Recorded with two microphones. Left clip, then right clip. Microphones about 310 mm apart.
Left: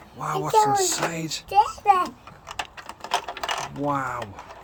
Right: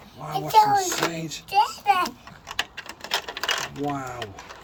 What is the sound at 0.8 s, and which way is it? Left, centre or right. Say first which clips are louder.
Speech: even; centre.